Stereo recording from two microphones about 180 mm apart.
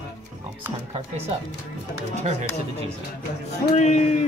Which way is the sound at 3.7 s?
40° left (ahead or behind).